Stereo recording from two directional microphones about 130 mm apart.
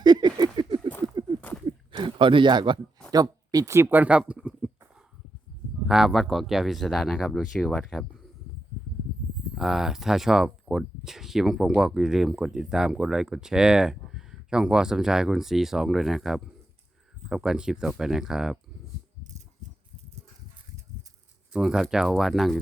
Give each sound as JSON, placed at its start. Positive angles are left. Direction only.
{"t": 0.0, "sound": "a sound", "side_deg": -35}
{"t": 3.1, "sound": "speech", "side_deg": -30}
{"t": 5.9, "sound": "speech", "side_deg": 0}
{"t": 9.6, "sound": "speech", "side_deg": -5}
{"t": 21.5, "sound": "speech", "side_deg": -5}